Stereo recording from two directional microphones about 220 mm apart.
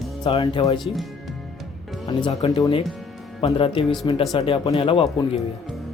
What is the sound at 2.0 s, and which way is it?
Speech, 20° left (ahead or behind).